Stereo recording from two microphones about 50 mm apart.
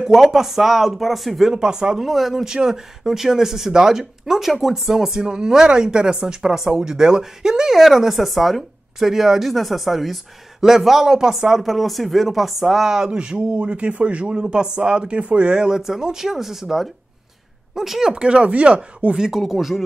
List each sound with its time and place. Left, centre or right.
0.0 s speech: centre
2.0 s speech: centre
18.1 s speech: right
19.1 s speech: centre